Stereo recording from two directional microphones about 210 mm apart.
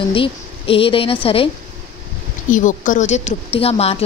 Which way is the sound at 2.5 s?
35° left (ahead or behind).